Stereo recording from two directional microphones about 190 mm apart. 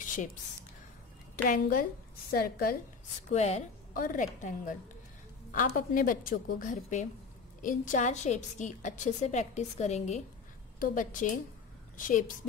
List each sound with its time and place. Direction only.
0.0 s a sound: 45° left (ahead or behind)
1.3 s a woman's voice: 50° left (ahead or behind)
3.3 s a woman's voice: 35° left (ahead or behind)